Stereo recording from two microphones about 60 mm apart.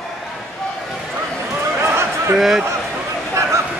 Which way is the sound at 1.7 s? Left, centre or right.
Right.